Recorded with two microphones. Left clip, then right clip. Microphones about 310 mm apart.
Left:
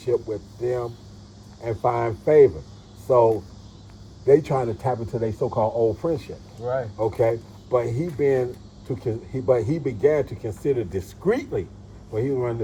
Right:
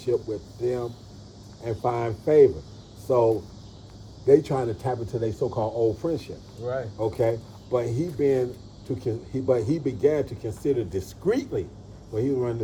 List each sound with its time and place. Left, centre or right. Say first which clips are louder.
0.0 s speech: left 2 dB; centre